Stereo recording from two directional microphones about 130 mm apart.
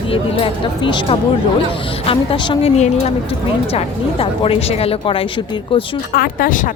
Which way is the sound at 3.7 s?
45° left (ahead or behind).